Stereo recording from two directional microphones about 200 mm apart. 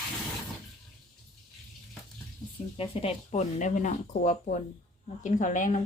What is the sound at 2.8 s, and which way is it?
Speech, 30° left (ahead or behind).